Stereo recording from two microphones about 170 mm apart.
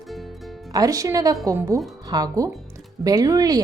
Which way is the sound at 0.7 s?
20° right (ahead or behind).